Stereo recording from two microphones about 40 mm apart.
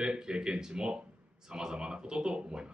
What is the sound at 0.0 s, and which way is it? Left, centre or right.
A man's voice, centre.